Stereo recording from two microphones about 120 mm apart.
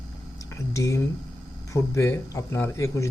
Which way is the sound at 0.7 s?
25° left (ahead or behind).